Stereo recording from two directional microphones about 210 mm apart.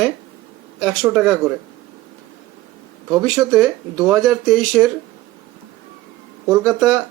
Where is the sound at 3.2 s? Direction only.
Centre (ahead or behind).